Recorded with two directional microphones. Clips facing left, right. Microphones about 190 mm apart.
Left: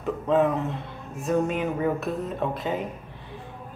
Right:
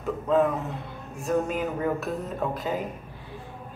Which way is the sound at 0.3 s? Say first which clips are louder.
Left 1 dB; centre (ahead or behind).